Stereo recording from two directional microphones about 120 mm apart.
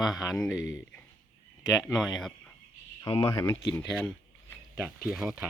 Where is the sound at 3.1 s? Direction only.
50° left (ahead or behind).